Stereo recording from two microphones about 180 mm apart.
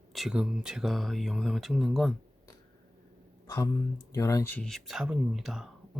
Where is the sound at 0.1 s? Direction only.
Centre (ahead or behind).